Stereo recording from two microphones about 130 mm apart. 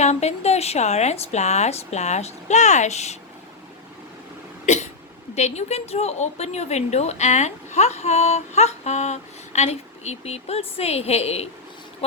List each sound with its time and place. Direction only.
0.0 s a woman's voice: 60° left (ahead or behind)
4.6 s cough: 65° left (ahead or behind)
5.3 s a woman's voice: 60° left (ahead or behind)